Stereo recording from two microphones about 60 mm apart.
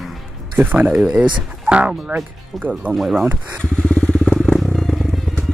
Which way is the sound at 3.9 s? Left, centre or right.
Left.